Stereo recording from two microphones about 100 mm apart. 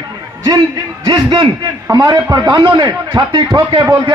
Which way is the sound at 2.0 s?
40° right (ahead or behind).